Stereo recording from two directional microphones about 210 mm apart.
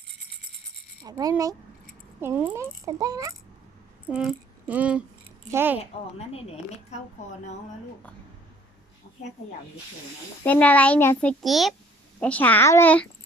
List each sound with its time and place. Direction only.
1.0 s a child's voice: 15° right (ahead or behind)
4.0 s a sound: 5° right (ahead or behind)
5.5 s a child's voice: 10° right (ahead or behind)
5.8 s speech: 30° left (ahead or behind)
10.4 s a child's voice: 5° left (ahead or behind)